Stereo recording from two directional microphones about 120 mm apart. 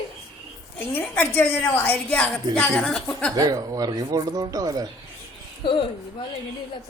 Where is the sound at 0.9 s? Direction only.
15° left (ahead or behind).